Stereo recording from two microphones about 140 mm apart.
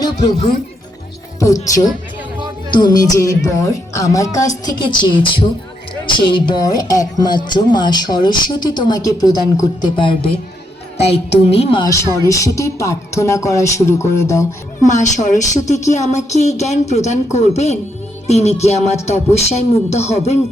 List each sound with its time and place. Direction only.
0.0 s speech: 30° left (ahead or behind)
2.7 s speech: 30° left (ahead or behind)
10.9 s speech: 50° left (ahead or behind)
11.8 s speech: 20° left (ahead or behind)
14.8 s speech: 60° left (ahead or behind)